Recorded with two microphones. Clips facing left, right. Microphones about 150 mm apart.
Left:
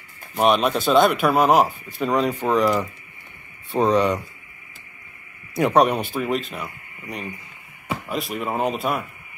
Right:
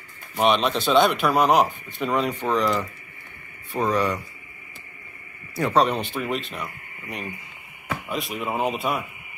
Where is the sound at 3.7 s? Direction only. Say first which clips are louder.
Left 4 dB; 20° left (ahead or behind).